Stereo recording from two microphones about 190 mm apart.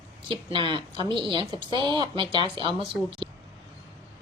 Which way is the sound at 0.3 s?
25° right (ahead or behind).